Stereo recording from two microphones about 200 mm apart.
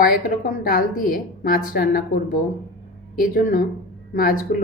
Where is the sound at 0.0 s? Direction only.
45° left (ahead or behind).